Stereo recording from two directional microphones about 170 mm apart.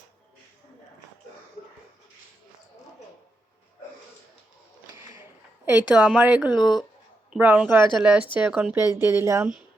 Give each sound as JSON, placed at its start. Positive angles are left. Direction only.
{"t": 5.6, "sound": "a woman's voice", "side_deg": -10}
{"t": 6.6, "sound": "speech", "side_deg": 25}
{"t": 7.3, "sound": "a woman's voice", "side_deg": -5}